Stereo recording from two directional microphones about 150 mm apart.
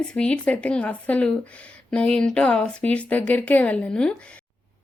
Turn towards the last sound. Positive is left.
turn(degrees=10)  # may be behind; listen again after turning